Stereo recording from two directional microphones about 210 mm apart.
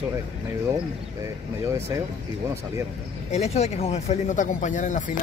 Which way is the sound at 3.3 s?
30° left (ahead or behind).